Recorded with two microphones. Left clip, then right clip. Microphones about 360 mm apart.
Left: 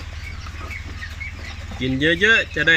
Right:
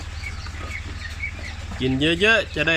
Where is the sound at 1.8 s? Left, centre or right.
Centre.